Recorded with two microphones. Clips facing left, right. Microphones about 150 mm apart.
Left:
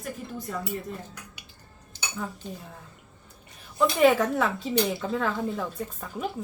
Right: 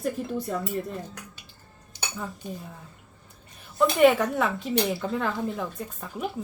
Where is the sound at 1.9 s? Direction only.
10° right (ahead or behind).